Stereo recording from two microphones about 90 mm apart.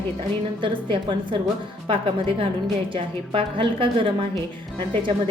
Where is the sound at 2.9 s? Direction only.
75° right (ahead or behind).